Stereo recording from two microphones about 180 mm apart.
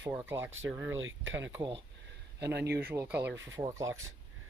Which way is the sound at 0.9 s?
90° right.